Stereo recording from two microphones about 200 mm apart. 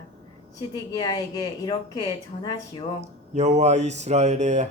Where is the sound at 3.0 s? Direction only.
35° right (ahead or behind).